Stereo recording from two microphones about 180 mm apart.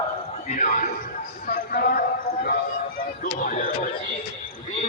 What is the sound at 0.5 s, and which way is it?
Speech, 45° left (ahead or behind).